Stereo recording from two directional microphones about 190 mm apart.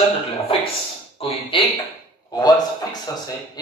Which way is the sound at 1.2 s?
30° left (ahead or behind).